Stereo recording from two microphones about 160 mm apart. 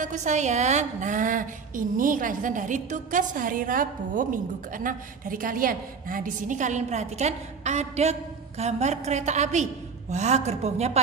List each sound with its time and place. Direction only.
0.0 s a woman's voice: 50° right (ahead or behind)